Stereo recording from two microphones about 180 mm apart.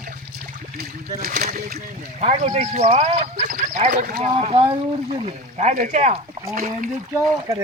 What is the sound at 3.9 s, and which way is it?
Speech, 55° right (ahead or behind).